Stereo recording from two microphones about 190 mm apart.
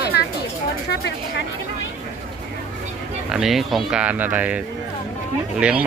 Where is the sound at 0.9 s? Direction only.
65° left (ahead or behind).